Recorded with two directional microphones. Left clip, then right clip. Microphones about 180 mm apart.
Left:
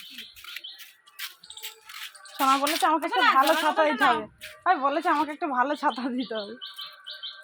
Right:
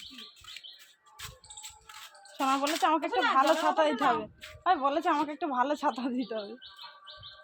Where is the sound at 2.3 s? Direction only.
30° left (ahead or behind).